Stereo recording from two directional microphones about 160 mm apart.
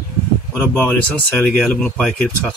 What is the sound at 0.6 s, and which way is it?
Speech, 15° left (ahead or behind).